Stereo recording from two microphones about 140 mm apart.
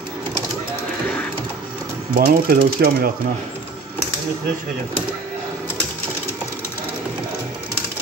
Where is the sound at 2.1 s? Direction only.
90° right.